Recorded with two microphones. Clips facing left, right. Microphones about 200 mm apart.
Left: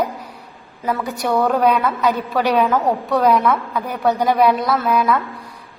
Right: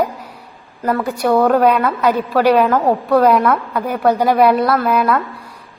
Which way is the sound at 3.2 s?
Centre (ahead or behind).